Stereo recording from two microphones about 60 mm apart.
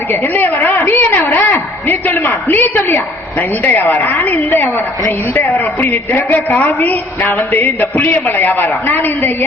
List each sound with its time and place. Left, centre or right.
0.3 s a woman's voice: left